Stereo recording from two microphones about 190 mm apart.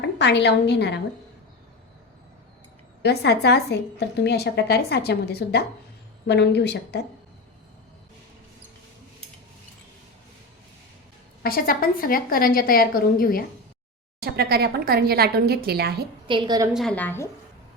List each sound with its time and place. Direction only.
0.0 s a woman's voice: 65° left (ahead or behind)
3.0 s a woman's voice: 60° left (ahead or behind)
11.4 s a woman's voice: 50° left (ahead or behind)
14.2 s speech: 55° right (ahead or behind)
16.2 s a woman's voice: 25° right (ahead or behind)
16.7 s speech: 5° left (ahead or behind)